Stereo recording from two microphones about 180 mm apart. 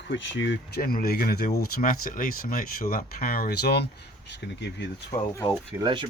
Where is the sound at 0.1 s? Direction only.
85° left.